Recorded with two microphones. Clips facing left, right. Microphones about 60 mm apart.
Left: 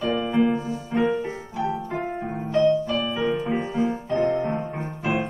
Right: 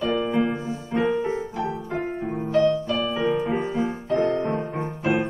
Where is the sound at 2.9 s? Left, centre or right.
Centre.